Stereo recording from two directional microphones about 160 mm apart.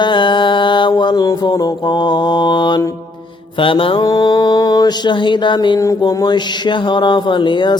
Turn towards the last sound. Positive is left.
turn(degrees=30)  # may be behind; listen again after turning